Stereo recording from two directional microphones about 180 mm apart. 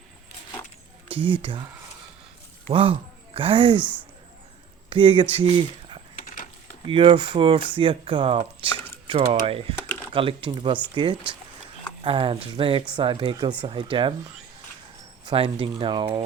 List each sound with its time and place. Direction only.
2.6 s speech: 30° right (ahead or behind)
4.9 s speech: 30° right (ahead or behind)
6.2 s a sound: 50° left (ahead or behind)
6.8 s speech: 30° right (ahead or behind)
15.3 s speech: 30° right (ahead or behind)